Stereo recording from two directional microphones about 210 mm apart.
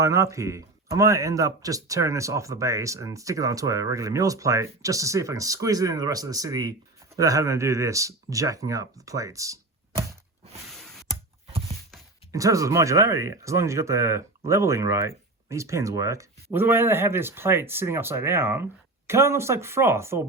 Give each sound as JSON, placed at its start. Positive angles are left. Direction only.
{"t": 0.0, "sound": "speech", "side_deg": -15}
{"t": 12.3, "sound": "speech", "side_deg": -15}